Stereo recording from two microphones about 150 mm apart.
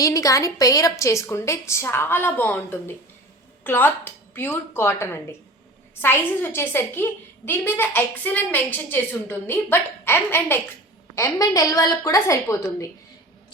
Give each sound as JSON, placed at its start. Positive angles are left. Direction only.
{"t": 0.0, "sound": "a woman's voice", "side_deg": 20}